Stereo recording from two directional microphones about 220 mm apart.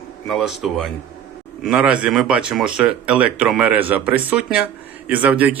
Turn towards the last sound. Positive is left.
turn(degrees=-5)  # may be behind; listen again after turning